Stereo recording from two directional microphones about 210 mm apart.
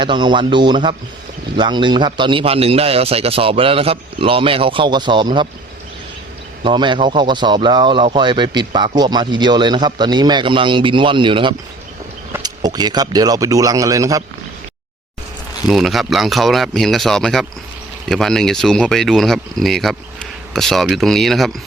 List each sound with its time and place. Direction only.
0.0 s speech: 20° right (ahead or behind)
6.6 s a man's voice: 20° right (ahead or behind)
15.6 s speech: centre (ahead or behind)